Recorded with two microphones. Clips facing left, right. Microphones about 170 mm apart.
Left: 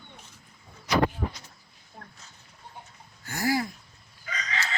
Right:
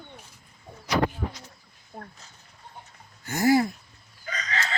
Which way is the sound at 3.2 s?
20° right (ahead or behind).